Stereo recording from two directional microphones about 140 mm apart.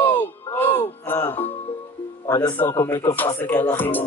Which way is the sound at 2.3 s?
30° left (ahead or behind).